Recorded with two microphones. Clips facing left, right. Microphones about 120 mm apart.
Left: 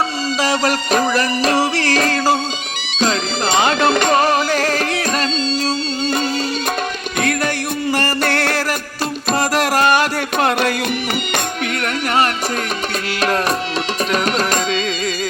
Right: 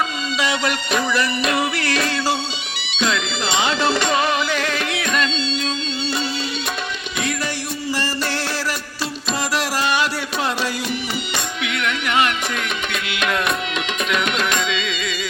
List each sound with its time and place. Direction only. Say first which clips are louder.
0.3 s music: left 4 dB; 40° left (ahead or behind)
3.0 s music: left 4 dB; 35° left (ahead or behind)
7.2 s music: left 6 dB; 55° left (ahead or behind)
11.3 s music: left 5 dB; 45° left (ahead or behind)